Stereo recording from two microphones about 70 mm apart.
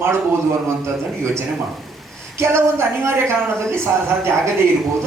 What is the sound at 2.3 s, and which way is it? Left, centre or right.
A woman's voice, right.